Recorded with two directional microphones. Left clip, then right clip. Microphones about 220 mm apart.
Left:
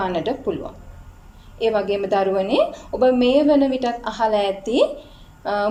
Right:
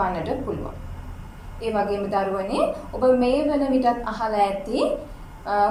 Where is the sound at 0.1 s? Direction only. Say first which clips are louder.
Left 4 dB; 40° left (ahead or behind).